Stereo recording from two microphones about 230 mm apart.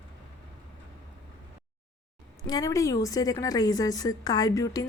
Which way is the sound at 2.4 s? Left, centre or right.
Centre.